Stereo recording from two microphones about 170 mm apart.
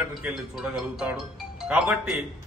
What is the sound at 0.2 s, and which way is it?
A man's voice, centre (ahead or behind).